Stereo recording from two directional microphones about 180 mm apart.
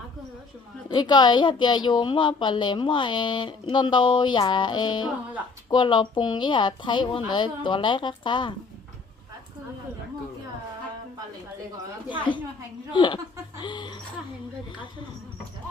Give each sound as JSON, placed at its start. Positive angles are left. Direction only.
{"t": 0.9, "sound": "a woman's voice", "side_deg": 25}
{"t": 12.9, "sound": "a woman's voice", "side_deg": 25}
{"t": 13.6, "sound": "a sound", "side_deg": 25}